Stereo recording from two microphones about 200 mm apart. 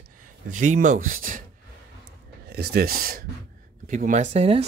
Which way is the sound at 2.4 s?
50° right (ahead or behind).